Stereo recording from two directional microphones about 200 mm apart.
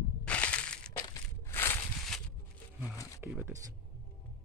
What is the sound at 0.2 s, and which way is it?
Crushing, 5° left (ahead or behind).